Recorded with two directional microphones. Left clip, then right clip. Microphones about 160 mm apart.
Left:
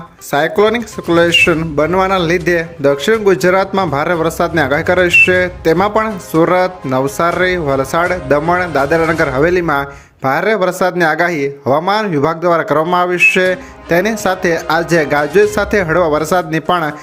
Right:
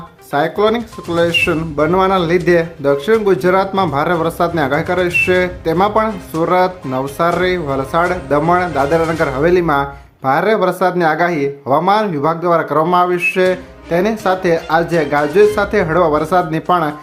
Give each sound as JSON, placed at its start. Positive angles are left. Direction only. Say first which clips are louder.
{"t": 0.3, "sound": "speech", "louder": "left 2 dB", "side_deg": 20}